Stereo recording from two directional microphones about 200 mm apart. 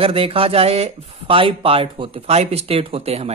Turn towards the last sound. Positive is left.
turn(degrees=-30)  # may be behind; listen again after turning